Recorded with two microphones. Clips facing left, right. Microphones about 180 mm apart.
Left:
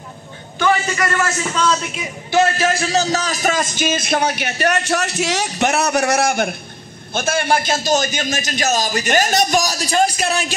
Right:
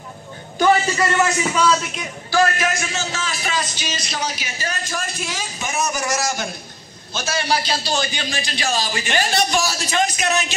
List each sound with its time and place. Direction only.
0.9 s a man's voice: 20° right (ahead or behind); by 2.0 s centre (ahead or behind)
2.3 s a man's voice: 30° left (ahead or behind)